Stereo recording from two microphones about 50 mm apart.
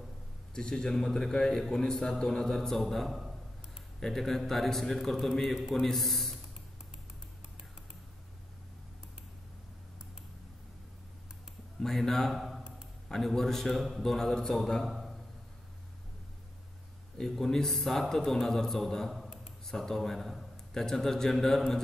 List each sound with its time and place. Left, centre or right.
0.6 s a man's voice: centre
11.8 s a man's voice: centre
14.9 s a sound: centre
17.2 s a man's voice: centre
19.2 s a sound: centre
19.6 s a man's voice: centre